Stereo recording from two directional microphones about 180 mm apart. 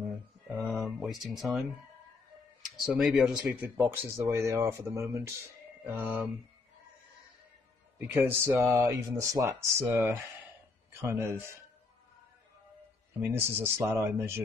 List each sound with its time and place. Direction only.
0.7 s a sound: centre (ahead or behind)
1.2 s speech: centre (ahead or behind)
2.8 s speech: centre (ahead or behind)
8.1 s speech: 10° right (ahead or behind)
13.2 s speech: 10° right (ahead or behind)